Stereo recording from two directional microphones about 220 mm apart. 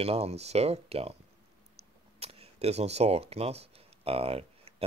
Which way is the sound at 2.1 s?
30° right (ahead or behind).